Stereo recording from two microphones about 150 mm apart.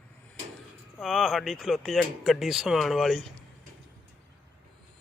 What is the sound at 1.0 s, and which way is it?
Speech, centre (ahead or behind).